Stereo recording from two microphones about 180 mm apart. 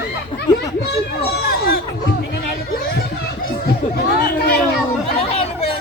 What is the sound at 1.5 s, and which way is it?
Chatter, 60° left (ahead or behind).